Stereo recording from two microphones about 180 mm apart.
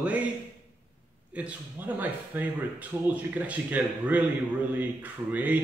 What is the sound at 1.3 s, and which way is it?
A man's voice, 10° right (ahead or behind).